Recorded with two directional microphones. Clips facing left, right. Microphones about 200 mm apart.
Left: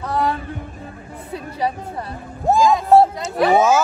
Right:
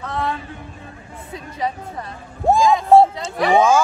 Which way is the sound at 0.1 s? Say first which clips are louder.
Left 4 dB; 35° left (ahead or behind).